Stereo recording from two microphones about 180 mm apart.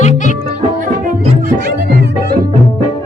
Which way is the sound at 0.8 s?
45° right (ahead or behind).